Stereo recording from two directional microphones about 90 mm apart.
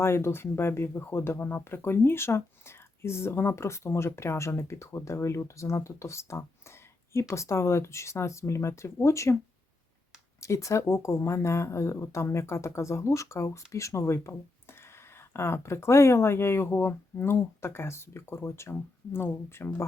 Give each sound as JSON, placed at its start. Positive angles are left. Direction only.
{"t": 0.0, "sound": "speech", "side_deg": 30}
{"t": 10.4, "sound": "speech", "side_deg": 35}